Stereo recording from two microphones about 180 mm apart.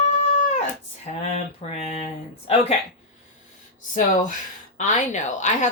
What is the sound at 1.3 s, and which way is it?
Speech, 35° left (ahead or behind).